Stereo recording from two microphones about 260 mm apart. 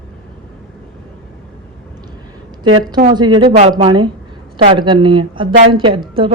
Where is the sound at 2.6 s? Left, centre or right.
Right.